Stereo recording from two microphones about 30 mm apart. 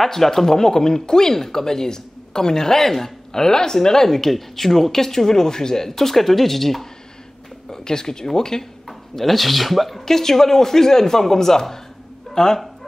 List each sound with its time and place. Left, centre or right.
0.0 s speech: centre
7.7 s speech: left
8.8 s speech: centre
10.0 s speech: centre